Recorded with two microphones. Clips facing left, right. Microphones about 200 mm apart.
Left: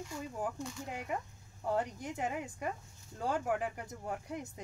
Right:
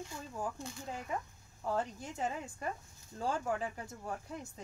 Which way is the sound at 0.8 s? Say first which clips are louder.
Even; 15° left (ahead or behind).